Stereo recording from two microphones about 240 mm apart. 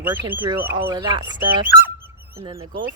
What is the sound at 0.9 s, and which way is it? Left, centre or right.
Speech, centre.